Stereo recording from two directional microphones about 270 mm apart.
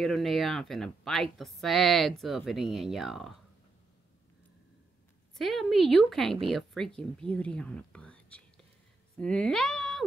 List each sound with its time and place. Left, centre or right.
0.0 s a woman's voice: centre
5.4 s a woman's voice: centre